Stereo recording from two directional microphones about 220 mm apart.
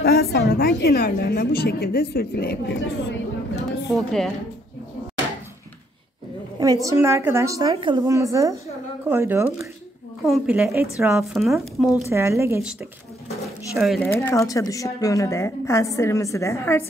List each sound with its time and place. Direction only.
0.0 s a woman's voice: 45° left (ahead or behind)
3.9 s speech: centre (ahead or behind)
6.6 s a woman's voice: 15° right (ahead or behind)
12.1 s a woman's voice: 10° right (ahead or behind)
13.7 s speech: centre (ahead or behind)